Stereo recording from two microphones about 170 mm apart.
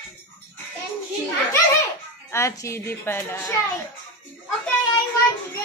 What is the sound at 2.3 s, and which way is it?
A woman's voice, 15° left (ahead or behind).